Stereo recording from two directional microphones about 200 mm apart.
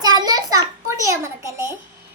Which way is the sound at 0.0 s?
20° right (ahead or behind).